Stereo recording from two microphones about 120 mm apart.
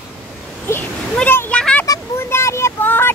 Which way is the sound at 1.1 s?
15° left (ahead or behind).